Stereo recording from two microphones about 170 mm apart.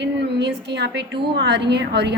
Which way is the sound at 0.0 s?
85° right.